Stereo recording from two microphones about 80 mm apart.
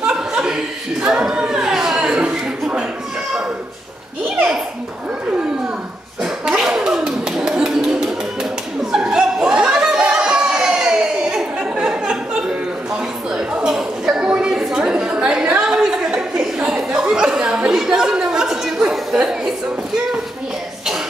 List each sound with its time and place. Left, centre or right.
0.0 s chuckle: centre
1.0 s speech: centre
6.2 s a sound: centre